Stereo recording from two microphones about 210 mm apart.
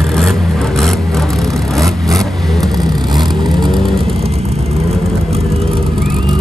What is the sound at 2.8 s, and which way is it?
Vehicle, 20° right (ahead or behind).